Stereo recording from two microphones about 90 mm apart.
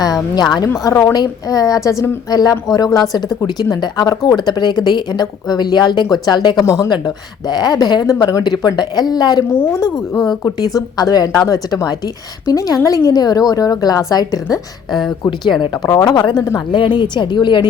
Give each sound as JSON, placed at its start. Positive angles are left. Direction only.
{"t": 0.0, "sound": "speech", "side_deg": 50}
{"t": 0.7, "sound": "a woman's voice", "side_deg": 30}
{"t": 1.1, "sound": "a woman's voice", "side_deg": 45}
{"t": 6.7, "sound": "speech", "side_deg": 40}
{"t": 8.4, "sound": "speech", "side_deg": 50}
{"t": 9.5, "sound": "a woman's voice", "side_deg": 30}
{"t": 9.8, "sound": "a woman's voice", "side_deg": 0}
{"t": 10.8, "sound": "a woman's voice", "side_deg": 45}
{"t": 15.8, "sound": "a woman's voice", "side_deg": 40}